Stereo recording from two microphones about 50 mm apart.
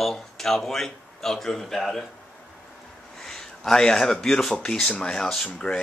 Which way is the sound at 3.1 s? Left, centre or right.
Centre.